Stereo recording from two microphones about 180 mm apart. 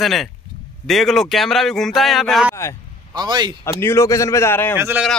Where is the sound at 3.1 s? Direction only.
25° right (ahead or behind).